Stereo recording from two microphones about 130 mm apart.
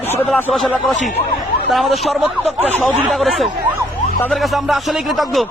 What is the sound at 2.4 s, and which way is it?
Speech, 55° right (ahead or behind).